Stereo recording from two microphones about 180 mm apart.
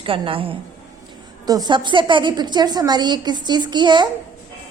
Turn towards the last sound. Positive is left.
turn(degrees=-25)  # may be behind; listen again after turning